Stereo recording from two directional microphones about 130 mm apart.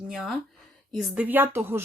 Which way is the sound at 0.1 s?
Centre (ahead or behind).